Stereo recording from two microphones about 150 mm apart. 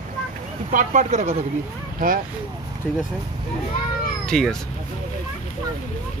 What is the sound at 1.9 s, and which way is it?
Speech, 65° right (ahead or behind).